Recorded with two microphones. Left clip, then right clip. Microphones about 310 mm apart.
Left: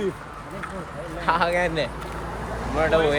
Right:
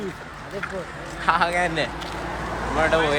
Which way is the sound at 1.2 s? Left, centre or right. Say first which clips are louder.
Right 1 dB; centre.